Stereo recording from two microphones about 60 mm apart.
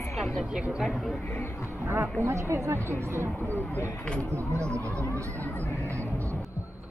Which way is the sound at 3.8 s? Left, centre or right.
Left.